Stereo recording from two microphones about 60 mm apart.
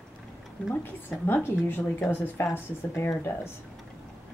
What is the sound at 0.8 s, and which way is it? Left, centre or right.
A woman's voice, left.